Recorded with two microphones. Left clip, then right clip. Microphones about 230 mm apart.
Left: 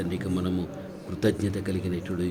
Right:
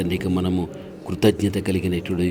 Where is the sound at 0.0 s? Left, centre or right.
Right.